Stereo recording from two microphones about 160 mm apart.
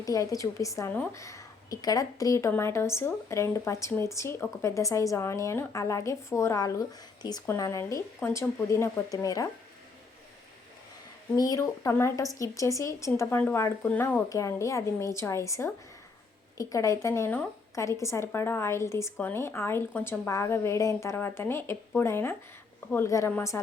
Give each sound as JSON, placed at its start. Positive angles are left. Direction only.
{"t": 0.0, "sound": "a woman's voice", "side_deg": 20}
{"t": 11.3, "sound": "a woman's voice", "side_deg": 20}